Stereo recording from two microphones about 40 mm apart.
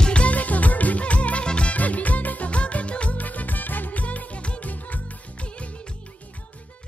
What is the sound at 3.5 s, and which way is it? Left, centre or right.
Music, left.